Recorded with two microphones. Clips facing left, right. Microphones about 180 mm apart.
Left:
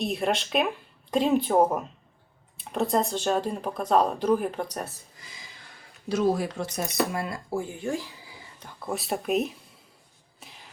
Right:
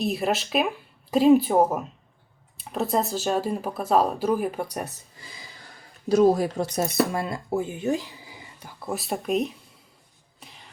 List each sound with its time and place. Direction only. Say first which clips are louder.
0.0 s speech: right 2 dB; centre (ahead or behind)
6.1 s speech: right 6 dB; 40° right (ahead or behind)
7.1 s speech: right 3 dB; 25° right (ahead or behind)
8.5 s speech: right 1 dB; 5° right (ahead or behind)
10.4 s a sound: right 1 dB; centre (ahead or behind)